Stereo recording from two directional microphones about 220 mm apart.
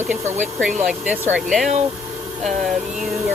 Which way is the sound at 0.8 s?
5° right (ahead or behind).